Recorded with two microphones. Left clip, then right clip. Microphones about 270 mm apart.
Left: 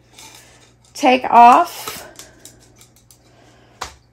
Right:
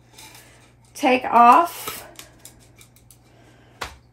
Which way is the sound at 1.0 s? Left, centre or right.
Left.